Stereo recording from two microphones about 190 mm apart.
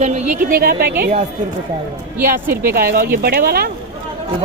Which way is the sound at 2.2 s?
15° right (ahead or behind).